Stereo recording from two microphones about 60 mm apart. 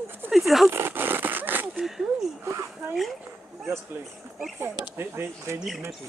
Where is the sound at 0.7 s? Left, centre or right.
Right.